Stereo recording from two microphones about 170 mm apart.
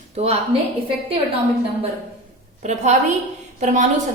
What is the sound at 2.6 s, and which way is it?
Speech, 45° right (ahead or behind).